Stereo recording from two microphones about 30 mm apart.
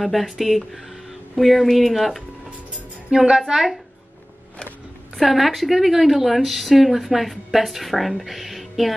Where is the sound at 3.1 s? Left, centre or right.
Right.